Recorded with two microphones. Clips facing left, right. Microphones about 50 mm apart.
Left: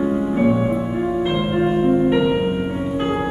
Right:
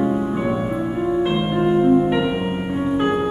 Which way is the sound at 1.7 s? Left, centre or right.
Centre.